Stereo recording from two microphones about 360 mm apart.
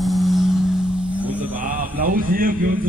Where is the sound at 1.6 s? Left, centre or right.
Right.